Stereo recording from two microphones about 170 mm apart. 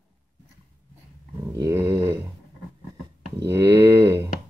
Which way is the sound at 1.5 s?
15° right (ahead or behind).